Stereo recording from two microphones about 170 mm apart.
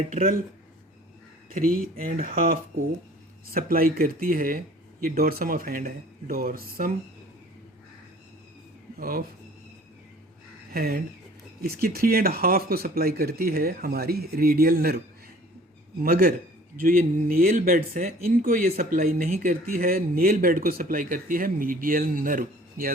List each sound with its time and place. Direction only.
0.1 s speech: 55° right (ahead or behind)
1.5 s speech: 55° right (ahead or behind)
9.0 s speech: 55° right (ahead or behind)
10.8 s speech: 60° right (ahead or behind)
16.0 s speech: 60° right (ahead or behind)